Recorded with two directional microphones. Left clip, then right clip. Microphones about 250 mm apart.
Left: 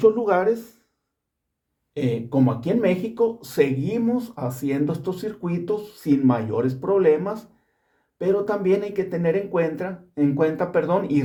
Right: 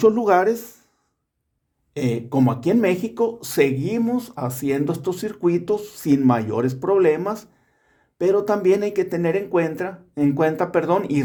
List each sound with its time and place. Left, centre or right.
0.0 s speech: right
1.9 s speech: right